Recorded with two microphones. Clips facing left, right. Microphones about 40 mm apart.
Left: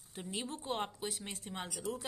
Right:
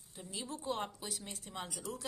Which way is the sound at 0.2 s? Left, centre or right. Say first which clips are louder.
Left 2 dB; left.